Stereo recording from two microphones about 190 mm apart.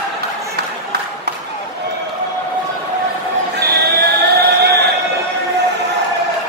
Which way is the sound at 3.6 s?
55° right (ahead or behind).